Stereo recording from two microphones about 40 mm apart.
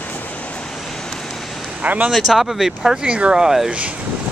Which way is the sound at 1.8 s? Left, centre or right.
Right.